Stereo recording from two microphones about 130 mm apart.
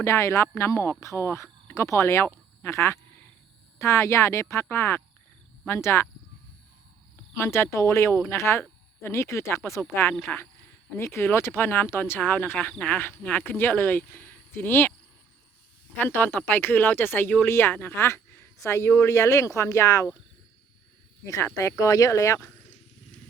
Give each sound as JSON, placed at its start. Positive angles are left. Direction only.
{"t": 0.0, "sound": "speech", "side_deg": 20}
{"t": 7.3, "sound": "speech", "side_deg": 20}
{"t": 16.0, "sound": "speech", "side_deg": 15}
{"t": 21.2, "sound": "speech", "side_deg": 25}